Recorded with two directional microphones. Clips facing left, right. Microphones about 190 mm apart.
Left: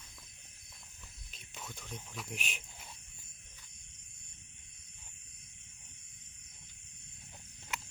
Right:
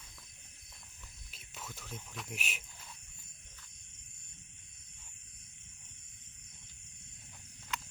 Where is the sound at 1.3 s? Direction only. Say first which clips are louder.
Even; 5° right (ahead or behind).